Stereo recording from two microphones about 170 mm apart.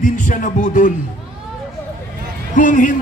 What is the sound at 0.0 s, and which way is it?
Speech, 50° left (ahead or behind).